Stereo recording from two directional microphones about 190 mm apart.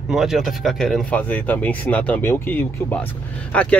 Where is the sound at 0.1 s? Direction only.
Centre (ahead or behind).